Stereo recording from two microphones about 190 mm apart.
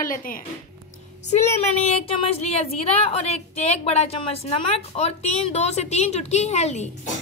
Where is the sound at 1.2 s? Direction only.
35° left (ahead or behind).